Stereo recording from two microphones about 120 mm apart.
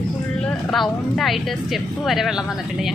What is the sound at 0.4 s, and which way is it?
Speech, 5° left (ahead or behind).